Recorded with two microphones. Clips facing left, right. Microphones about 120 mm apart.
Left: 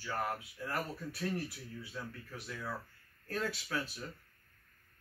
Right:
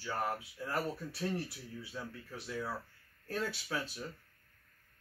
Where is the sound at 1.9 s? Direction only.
10° right (ahead or behind).